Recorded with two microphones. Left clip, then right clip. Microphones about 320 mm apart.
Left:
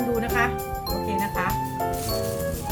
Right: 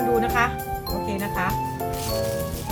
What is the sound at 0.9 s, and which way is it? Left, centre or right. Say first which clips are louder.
Music: left 3 dB; centre.